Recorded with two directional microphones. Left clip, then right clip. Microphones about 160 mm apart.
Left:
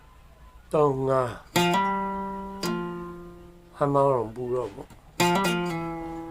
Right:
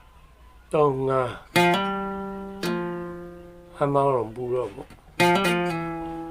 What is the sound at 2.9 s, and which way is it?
Music, 50° right (ahead or behind).